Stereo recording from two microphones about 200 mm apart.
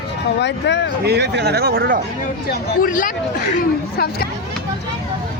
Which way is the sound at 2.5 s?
45° left (ahead or behind).